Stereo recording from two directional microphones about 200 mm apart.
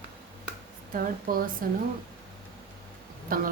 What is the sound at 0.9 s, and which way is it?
Speech, 45° right (ahead or behind).